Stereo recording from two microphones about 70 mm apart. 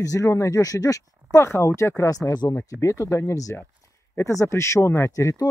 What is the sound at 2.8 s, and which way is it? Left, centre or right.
Speech, left.